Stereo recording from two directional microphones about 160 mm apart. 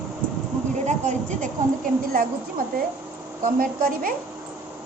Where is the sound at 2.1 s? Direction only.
65° right (ahead or behind).